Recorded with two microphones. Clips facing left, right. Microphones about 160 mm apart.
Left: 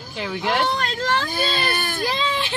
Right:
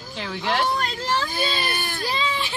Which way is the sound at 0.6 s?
65° left (ahead or behind).